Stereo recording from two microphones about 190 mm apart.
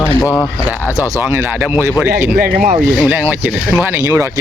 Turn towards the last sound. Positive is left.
turn(degrees=-15)  # may be behind; listen again after turning